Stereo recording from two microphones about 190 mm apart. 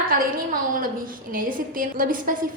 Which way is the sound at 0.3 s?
45° right (ahead or behind).